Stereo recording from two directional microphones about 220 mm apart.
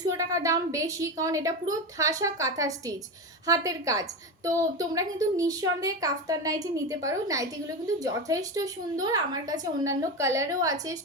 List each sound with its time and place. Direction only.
0.0 s a woman's voice: 15° right (ahead or behind)